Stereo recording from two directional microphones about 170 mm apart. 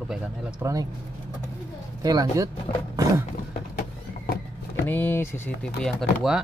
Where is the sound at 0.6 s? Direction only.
20° right (ahead or behind).